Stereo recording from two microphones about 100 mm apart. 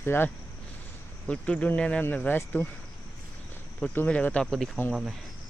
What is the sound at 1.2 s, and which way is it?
Speech, 10° left (ahead or behind).